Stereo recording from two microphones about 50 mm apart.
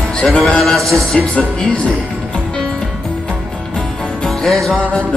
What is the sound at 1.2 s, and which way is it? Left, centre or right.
Music, left.